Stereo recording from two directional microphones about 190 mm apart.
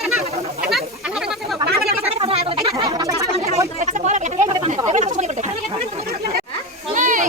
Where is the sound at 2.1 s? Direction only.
30° right (ahead or behind).